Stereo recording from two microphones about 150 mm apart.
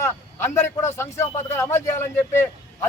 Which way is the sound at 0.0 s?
15° left (ahead or behind).